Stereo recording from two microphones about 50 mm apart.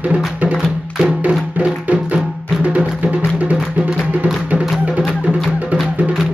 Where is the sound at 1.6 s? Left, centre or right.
Right.